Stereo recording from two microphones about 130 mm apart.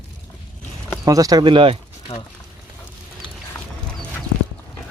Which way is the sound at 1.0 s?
25° right (ahead or behind).